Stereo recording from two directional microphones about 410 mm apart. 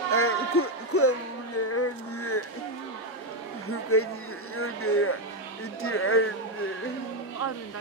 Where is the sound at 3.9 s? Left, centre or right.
Left.